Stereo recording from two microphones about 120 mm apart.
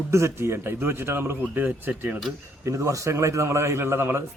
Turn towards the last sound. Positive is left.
turn(degrees=-20)  # may be behind; listen again after turning